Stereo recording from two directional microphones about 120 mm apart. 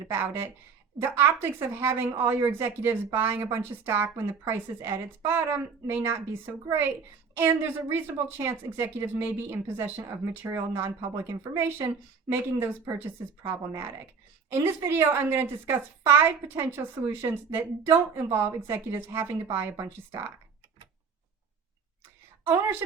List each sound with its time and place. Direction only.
0.1 s a woman's voice: 20° right (ahead or behind)